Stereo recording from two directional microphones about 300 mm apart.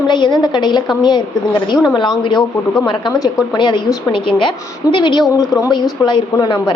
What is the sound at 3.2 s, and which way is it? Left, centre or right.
A woman's voice, centre.